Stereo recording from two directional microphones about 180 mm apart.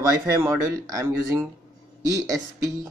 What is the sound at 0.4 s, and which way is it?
Speech, 15° right (ahead or behind).